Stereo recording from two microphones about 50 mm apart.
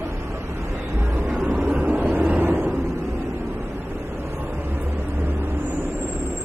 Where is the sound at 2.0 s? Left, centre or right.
Right.